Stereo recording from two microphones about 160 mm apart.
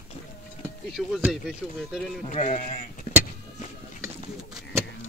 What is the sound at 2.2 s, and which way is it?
Speech, 50° left (ahead or behind).